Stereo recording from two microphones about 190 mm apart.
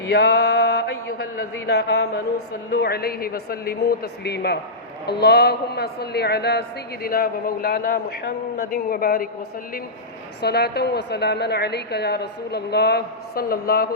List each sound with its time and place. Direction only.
0.1 s mantra: 60° left (ahead or behind)
1.6 s a woman's voice: 60° left (ahead or behind)
10.4 s a woman's voice: 60° left (ahead or behind)